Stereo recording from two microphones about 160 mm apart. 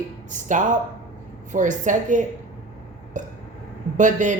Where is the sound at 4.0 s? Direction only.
50° right (ahead or behind).